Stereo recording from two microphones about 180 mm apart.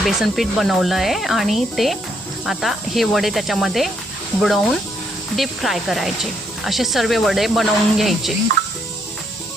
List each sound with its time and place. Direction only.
0.0 s speech: centre (ahead or behind)